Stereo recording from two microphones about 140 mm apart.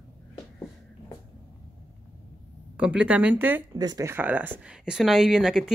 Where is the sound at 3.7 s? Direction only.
25° right (ahead or behind).